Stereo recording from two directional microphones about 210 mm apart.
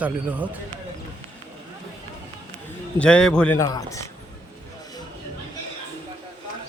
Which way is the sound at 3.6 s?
15° left (ahead or behind).